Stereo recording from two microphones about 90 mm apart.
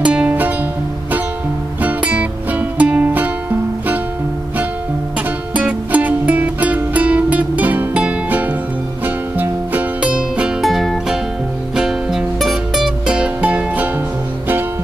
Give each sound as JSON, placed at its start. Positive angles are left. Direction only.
{"t": 0.0, "sound": "music", "side_deg": -15}
{"t": 1.8, "sound": "music", "side_deg": -15}
{"t": 5.5, "sound": "music", "side_deg": -15}
{"t": 10.6, "sound": "music", "side_deg": 0}